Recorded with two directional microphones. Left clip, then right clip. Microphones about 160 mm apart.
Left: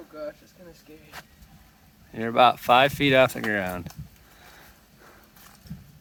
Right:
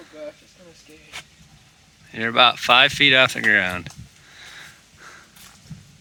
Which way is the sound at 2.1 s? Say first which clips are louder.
Right 3 dB; 10° left (ahead or behind).